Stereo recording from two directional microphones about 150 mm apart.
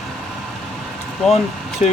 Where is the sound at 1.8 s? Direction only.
50° left (ahead or behind).